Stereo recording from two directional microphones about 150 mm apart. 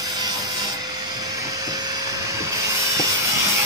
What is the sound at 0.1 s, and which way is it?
Wood, 25° right (ahead or behind).